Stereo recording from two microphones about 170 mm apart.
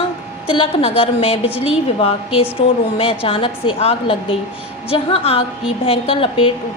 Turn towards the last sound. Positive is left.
turn(degrees=30)  # may be behind; listen again after turning